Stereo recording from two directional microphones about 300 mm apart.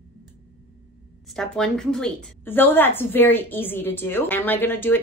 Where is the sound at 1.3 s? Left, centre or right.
Centre.